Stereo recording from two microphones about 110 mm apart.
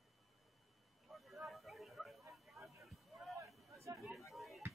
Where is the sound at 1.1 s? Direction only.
Centre (ahead or behind).